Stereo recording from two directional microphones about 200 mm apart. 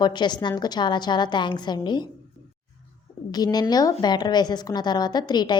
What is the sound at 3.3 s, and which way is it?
A woman's voice, 20° left (ahead or behind).